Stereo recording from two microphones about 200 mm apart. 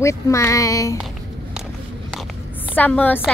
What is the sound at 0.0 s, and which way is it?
Speech, 15° left (ahead or behind).